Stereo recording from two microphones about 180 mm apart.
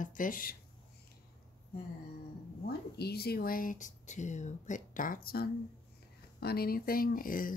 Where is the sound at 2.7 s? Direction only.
60° left (ahead or behind).